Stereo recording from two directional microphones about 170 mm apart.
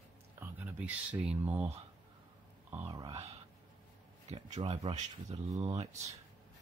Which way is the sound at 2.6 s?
10° right (ahead or behind).